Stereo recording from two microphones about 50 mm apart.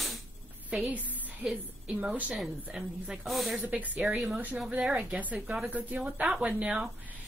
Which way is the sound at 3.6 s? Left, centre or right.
Right.